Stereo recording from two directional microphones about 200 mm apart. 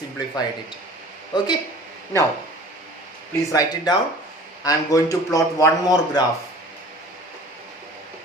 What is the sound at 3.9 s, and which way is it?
A man's voice, 20° left (ahead or behind).